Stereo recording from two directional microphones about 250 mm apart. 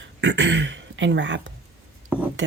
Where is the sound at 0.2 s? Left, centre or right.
Right.